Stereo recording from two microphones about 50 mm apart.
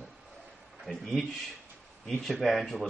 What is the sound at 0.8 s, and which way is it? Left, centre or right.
Speech, centre.